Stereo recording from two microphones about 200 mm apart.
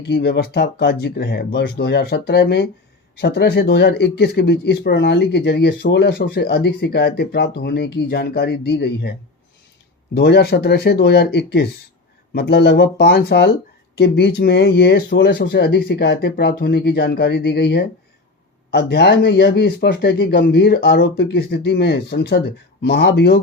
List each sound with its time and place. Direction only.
0.0 s speech: 55° left (ahead or behind)
10.2 s speech: 55° left (ahead or behind)